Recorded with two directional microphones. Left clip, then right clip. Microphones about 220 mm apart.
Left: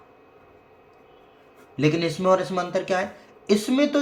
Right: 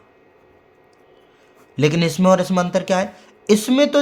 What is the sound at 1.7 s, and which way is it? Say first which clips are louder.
Speech: right 4 dB; 55° right (ahead or behind).